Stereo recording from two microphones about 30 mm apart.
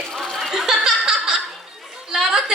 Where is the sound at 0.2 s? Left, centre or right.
Centre.